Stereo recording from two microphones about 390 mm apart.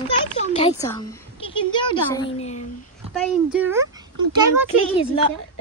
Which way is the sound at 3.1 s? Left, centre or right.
Centre.